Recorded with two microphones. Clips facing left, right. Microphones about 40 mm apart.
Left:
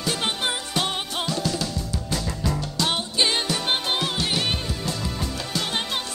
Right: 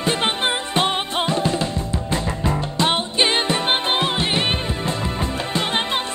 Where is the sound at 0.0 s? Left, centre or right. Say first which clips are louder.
Right 5 dB; right.